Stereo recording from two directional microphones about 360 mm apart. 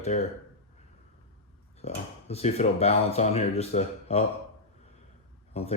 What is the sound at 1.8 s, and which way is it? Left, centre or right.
A man's voice, centre.